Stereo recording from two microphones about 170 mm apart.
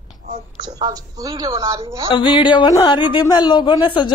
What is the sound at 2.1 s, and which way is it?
Speech, 30° left (ahead or behind).